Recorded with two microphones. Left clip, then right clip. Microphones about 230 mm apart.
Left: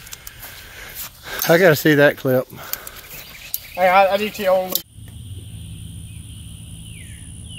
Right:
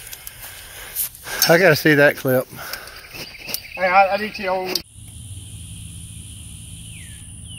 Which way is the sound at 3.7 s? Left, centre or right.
Left.